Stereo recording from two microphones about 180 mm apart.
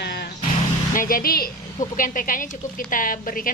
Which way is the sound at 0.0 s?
65° left (ahead or behind).